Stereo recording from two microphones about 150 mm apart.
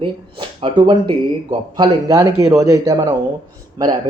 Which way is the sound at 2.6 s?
25° right (ahead or behind).